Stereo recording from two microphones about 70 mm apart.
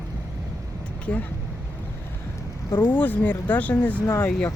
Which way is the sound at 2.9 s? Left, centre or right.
Left.